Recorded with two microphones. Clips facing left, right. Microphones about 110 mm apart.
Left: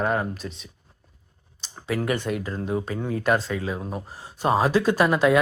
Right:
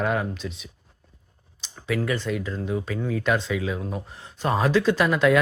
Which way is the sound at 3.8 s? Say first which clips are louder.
Even; 35° left (ahead or behind).